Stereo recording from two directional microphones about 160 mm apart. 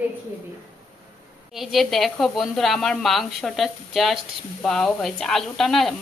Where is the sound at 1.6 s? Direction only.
Centre (ahead or behind).